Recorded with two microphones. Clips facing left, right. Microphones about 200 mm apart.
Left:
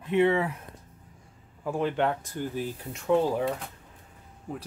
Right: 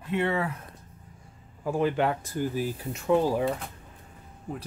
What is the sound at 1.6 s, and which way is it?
Speech, 5° right (ahead or behind).